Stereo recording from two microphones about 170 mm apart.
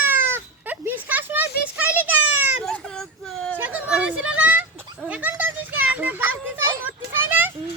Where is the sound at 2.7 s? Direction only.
5° left (ahead or behind).